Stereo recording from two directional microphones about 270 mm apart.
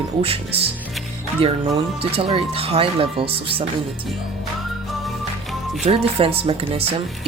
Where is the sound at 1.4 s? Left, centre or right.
Right.